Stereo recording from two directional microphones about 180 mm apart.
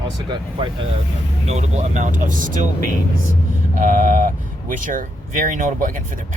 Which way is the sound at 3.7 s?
45° right (ahead or behind).